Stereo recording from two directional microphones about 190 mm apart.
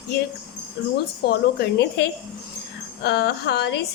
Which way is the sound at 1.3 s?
55° left (ahead or behind).